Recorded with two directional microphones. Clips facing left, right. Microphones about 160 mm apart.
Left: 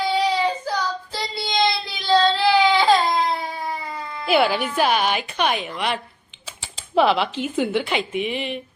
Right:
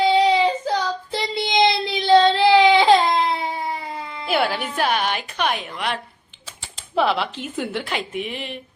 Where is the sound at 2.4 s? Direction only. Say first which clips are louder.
Right 3 dB; 20° right (ahead or behind).